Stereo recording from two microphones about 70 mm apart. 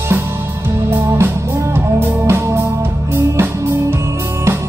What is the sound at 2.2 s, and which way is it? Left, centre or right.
Music, right.